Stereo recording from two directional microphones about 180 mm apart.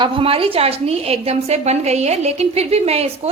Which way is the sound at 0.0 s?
30° right (ahead or behind).